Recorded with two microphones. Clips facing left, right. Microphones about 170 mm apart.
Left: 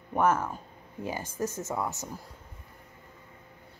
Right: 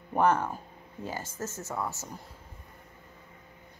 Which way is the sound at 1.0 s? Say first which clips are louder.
Left 4 dB; 15° left (ahead or behind).